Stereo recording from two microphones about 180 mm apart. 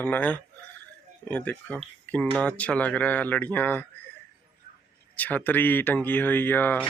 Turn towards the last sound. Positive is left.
turn(degrees=10)  # may be behind; listen again after turning